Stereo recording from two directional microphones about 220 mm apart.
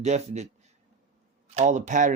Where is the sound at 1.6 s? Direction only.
35° right (ahead or behind).